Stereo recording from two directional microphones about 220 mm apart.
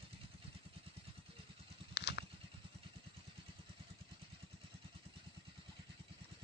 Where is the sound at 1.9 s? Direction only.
50° left (ahead or behind).